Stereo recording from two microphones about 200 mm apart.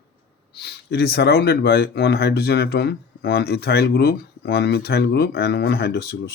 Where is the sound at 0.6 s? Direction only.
55° left (ahead or behind).